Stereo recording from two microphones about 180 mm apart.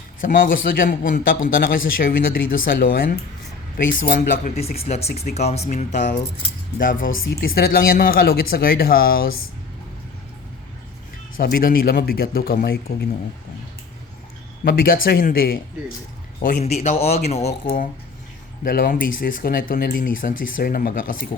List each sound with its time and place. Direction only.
0.2 s speech: 50° left (ahead or behind)
4.6 s speech: 35° left (ahead or behind); by 9.3 s 55° left (ahead or behind)
11.3 s speech: 50° left (ahead or behind)
14.6 s speech: 55° left (ahead or behind); by 17.8 s 35° left (ahead or behind)
18.6 s speech: 50° left (ahead or behind)